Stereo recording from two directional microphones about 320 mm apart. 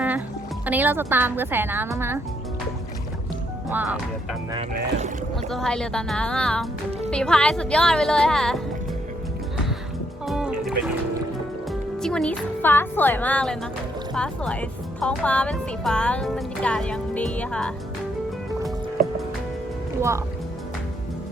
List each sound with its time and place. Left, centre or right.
0.6 s speech: centre
3.8 s speech: centre
4.5 s speech: right
5.5 s speech: centre
10.2 s music: centre
11.7 s speech: centre
20.0 s speech: centre